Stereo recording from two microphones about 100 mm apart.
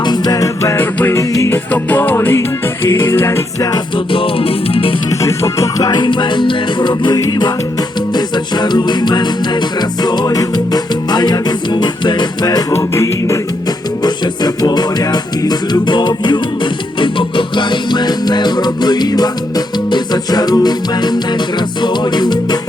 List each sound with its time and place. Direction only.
0.0 s music: 45° left (ahead or behind)
0.8 s music: 20° left (ahead or behind)
1.2 s music: 35° left (ahead or behind)
1.5 s music: 20° left (ahead or behind)
3.9 s music: 60° left (ahead or behind)
5.2 s music: 30° left (ahead or behind)
12.7 s music: 30° left (ahead or behind)
14.0 s music: 45° left (ahead or behind)